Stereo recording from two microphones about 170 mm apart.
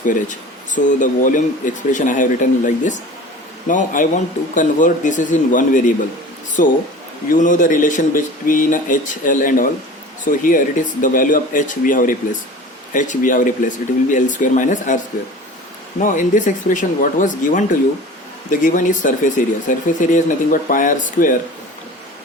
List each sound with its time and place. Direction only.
0.0 s speech: 50° left (ahead or behind)